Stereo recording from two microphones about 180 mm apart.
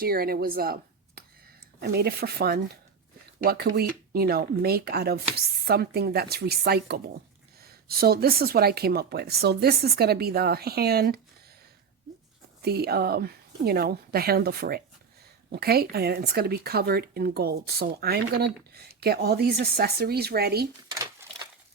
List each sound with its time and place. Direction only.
0.0 s speech: 60° right (ahead or behind)
12.6 s speech: 60° right (ahead or behind)
20.9 s a sound: 20° right (ahead or behind)